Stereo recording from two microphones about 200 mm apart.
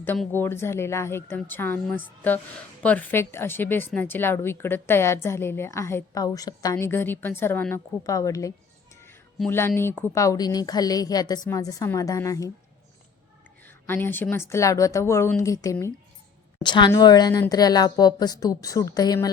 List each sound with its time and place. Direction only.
0.0 s speech: 10° left (ahead or behind)
13.7 s a woman's voice: 10° left (ahead or behind)